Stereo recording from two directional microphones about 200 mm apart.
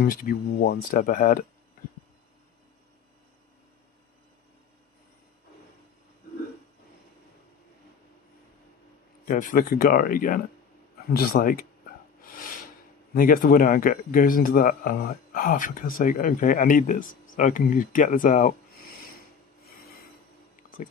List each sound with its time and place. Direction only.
0.0 s speech: 45° left (ahead or behind)
9.2 s speech: 45° left (ahead or behind)
12.3 s a sound: 45° left (ahead or behind)
13.1 s speech: 45° left (ahead or behind)